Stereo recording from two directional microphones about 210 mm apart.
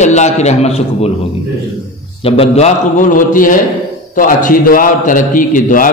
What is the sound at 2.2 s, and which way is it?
A man's voice, 25° left (ahead or behind).